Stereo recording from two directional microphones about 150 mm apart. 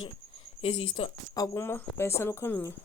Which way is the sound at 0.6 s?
40° left (ahead or behind).